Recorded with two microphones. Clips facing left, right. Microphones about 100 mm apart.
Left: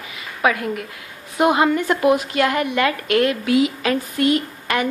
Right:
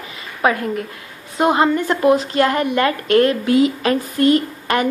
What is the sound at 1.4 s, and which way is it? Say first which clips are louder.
Speech: right 1 dB; 15° left (ahead or behind).